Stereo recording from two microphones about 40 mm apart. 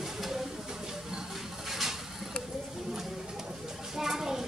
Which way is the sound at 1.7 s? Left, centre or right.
Centre.